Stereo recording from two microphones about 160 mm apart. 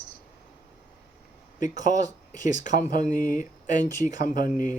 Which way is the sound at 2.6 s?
55° left (ahead or behind).